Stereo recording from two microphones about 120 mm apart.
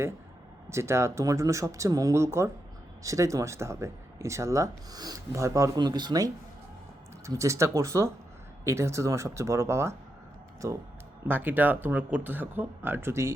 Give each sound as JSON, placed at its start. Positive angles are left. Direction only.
{"t": 0.7, "sound": "speech", "side_deg": -20}
{"t": 11.3, "sound": "speech", "side_deg": -15}